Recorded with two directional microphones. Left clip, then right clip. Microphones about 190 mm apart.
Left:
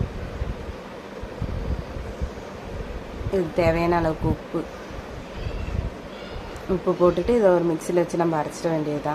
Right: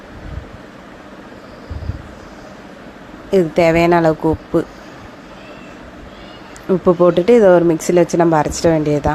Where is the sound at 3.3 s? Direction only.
40° right (ahead or behind).